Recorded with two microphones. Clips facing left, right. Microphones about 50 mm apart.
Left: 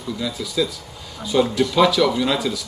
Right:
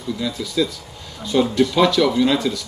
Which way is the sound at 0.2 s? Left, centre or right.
Centre.